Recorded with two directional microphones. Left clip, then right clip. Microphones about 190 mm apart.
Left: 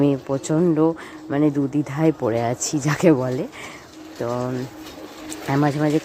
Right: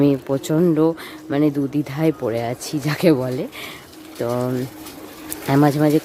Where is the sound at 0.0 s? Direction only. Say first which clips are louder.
Right 2 dB; 10° right (ahead or behind).